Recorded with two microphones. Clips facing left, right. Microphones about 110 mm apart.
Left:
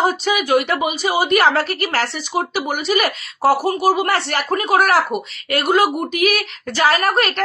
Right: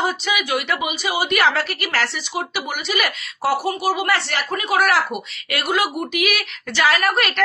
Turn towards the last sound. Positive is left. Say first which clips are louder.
# left 2 dB
turn(degrees=35)  # may be behind; listen again after turning